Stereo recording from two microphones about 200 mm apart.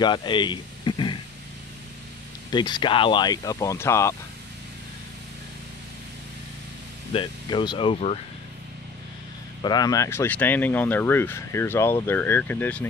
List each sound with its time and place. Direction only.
0.0 s a sound: 20° left (ahead or behind)
2.5 s speech: 20° left (ahead or behind)
7.2 s speech: 25° left (ahead or behind)
9.6 s speech: 20° left (ahead or behind)